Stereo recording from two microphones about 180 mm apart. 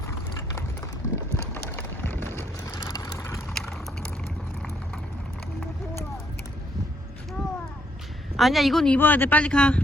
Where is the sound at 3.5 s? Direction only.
5° left (ahead or behind).